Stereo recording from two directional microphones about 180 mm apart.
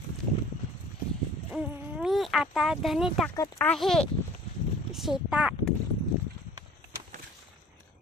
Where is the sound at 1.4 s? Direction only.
5° right (ahead or behind).